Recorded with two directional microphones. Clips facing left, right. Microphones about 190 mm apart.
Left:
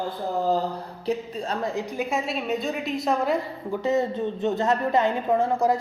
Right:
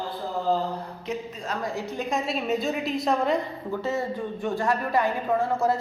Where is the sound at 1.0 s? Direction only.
35° left (ahead or behind).